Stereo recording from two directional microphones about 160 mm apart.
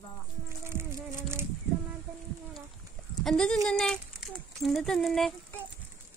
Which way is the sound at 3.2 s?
5° left (ahead or behind).